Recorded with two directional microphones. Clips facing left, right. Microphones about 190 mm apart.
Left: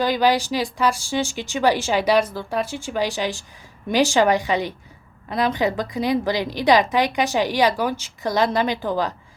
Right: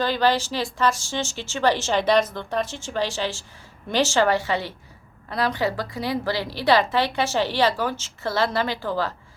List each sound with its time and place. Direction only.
0.0 s a woman's voice: 10° left (ahead or behind)